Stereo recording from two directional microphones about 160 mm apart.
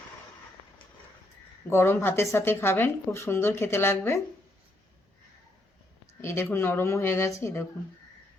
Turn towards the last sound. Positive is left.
turn(degrees=15)  # may be behind; listen again after turning